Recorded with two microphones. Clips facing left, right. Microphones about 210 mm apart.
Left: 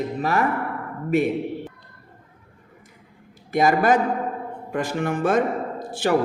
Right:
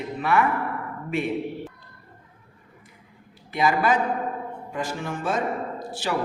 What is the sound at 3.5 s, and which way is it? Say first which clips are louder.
A man's voice: left 4 dB; 45° left (ahead or behind).